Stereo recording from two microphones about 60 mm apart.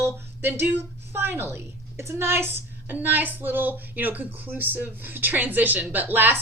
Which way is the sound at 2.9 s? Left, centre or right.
Right.